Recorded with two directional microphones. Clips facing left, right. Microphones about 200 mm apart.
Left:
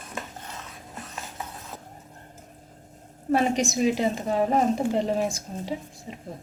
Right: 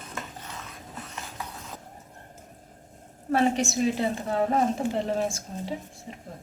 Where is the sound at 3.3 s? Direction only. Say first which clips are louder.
Left 1 dB; 15° left (ahead or behind).